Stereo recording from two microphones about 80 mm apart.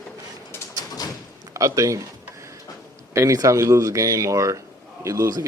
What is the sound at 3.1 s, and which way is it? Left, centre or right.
A man's voice, right.